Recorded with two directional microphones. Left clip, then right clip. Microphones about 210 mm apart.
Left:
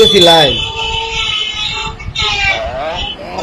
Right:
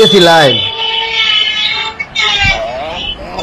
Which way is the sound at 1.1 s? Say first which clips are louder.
Right 5 dB; 40° left (ahead or behind).